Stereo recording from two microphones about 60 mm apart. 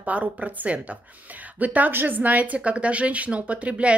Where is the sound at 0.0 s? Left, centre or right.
Right.